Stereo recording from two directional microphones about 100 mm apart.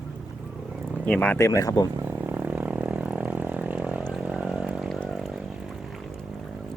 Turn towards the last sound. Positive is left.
turn(degrees=-10)  # may be behind; listen again after turning